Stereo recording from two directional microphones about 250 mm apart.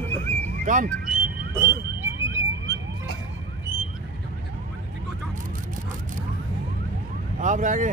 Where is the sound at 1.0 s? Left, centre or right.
Centre.